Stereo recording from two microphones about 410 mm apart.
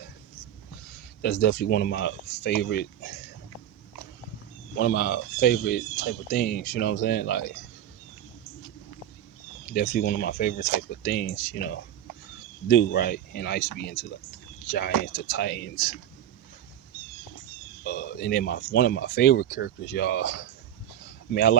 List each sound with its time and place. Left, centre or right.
1.2 s speech: left
4.8 s speech: left
9.7 s speech: left
17.8 s speech: left
21.3 s speech: left